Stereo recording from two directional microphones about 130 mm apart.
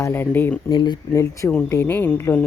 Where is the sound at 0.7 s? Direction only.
35° left (ahead or behind).